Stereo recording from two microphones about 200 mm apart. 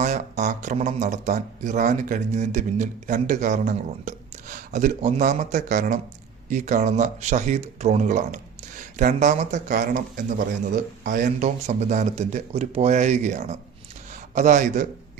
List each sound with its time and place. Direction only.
0.0 s a man's voice: 35° right (ahead or behind)